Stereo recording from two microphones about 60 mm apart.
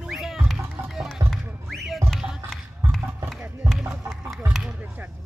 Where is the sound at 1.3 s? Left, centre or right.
Centre.